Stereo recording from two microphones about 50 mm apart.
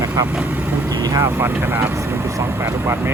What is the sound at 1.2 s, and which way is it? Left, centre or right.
Speech, right.